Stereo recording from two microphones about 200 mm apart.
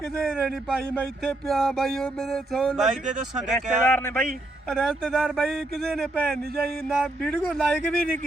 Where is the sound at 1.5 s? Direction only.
Centre (ahead or behind).